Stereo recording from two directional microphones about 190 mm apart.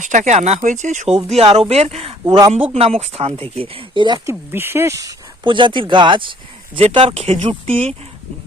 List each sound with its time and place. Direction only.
0.0 s speech: 40° right (ahead or behind)
2.2 s speech: 20° right (ahead or behind)
2.7 s speech: 35° right (ahead or behind)
4.5 s speech: 10° right (ahead or behind); by 7.9 s 30° right (ahead or behind)